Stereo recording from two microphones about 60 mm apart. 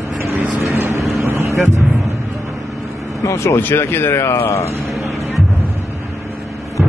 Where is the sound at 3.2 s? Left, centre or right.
Left.